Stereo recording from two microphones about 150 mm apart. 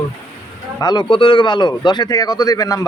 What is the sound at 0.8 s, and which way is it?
Speech, 30° left (ahead or behind).